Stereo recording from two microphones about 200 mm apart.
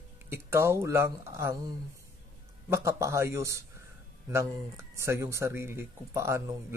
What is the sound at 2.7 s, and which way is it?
Speech, 15° right (ahead or behind).